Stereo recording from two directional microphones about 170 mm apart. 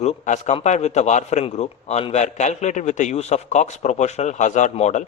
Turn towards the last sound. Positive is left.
turn(degrees=45)  # may be behind; listen again after turning